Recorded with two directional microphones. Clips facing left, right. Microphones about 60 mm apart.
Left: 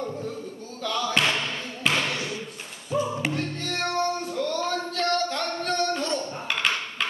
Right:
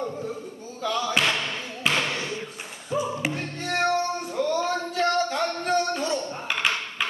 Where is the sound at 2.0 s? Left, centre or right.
Right.